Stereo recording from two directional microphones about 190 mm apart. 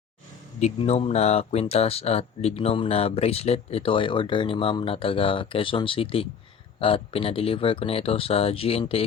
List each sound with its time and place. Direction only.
0.6 s speech: 35° left (ahead or behind)